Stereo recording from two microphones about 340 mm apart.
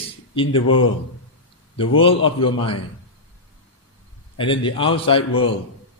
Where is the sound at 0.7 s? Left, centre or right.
Left.